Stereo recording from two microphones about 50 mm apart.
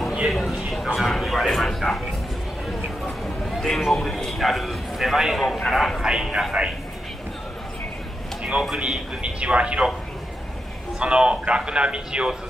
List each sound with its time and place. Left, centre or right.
0.3 s a sound: centre
3.4 s a man's voice: centre
6.0 s speech: centre
8.4 s a sound: right
8.7 s a man's voice: centre
11.0 s a man's voice: centre